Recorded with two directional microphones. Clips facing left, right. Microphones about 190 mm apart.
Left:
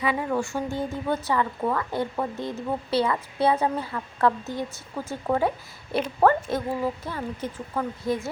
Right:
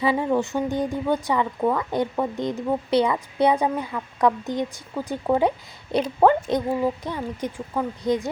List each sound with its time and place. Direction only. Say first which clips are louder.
0.0 s speech: right 4 dB; 30° right (ahead or behind)